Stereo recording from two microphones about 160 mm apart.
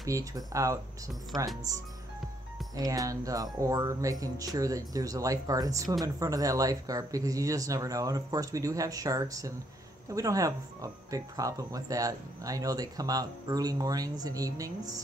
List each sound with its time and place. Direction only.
0.0 s speech: 20° right (ahead or behind)
2.7 s speech: 20° right (ahead or behind)